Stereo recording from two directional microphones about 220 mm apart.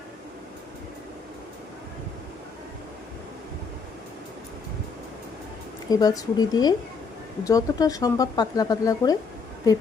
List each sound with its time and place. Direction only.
5.9 s speech: 15° left (ahead or behind)